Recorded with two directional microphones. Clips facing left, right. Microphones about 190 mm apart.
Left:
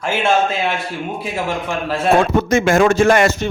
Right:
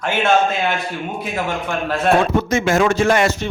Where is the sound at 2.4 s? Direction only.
50° left (ahead or behind).